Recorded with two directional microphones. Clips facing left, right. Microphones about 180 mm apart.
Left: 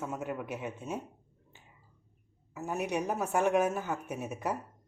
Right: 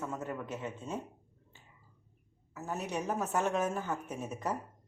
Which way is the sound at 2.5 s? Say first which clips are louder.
Left 4 dB; 10° left (ahead or behind).